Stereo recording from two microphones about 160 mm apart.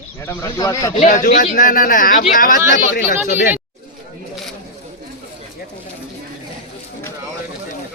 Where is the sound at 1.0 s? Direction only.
50° left (ahead or behind).